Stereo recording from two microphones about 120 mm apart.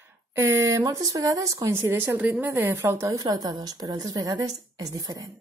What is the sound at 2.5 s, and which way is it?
A woman's voice, 20° right (ahead or behind).